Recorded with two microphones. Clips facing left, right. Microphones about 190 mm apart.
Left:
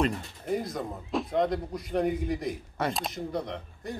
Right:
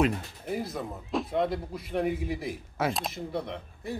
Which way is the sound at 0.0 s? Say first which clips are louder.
Right 2 dB; 5° right (ahead or behind).